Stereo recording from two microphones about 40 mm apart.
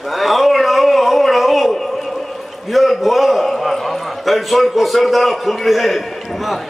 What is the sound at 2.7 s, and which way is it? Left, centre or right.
A man's voice, centre.